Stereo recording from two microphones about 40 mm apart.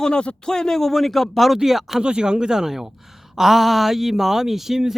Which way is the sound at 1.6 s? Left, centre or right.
Centre.